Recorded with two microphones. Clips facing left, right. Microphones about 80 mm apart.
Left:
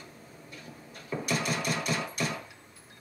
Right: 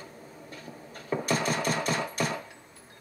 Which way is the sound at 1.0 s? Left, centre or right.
Right.